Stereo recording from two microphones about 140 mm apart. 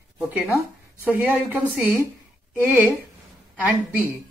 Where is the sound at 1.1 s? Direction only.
10° right (ahead or behind).